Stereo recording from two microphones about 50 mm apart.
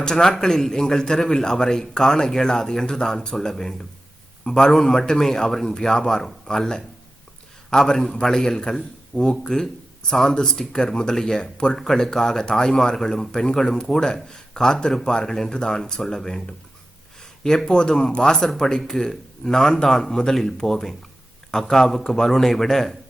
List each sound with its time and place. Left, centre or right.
0.0 s a man's voice: centre
11.8 s a man's voice: centre
17.2 s a sound: centre
17.7 s a man's voice: centre